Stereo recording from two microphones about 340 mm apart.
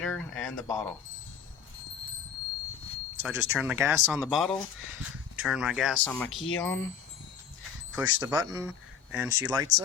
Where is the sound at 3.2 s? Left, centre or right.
Centre.